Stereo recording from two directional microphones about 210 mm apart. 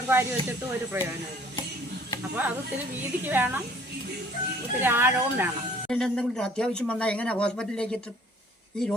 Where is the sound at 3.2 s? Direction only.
10° right (ahead or behind).